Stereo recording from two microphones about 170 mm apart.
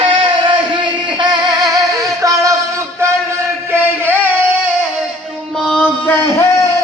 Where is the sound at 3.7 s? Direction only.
10° right (ahead or behind).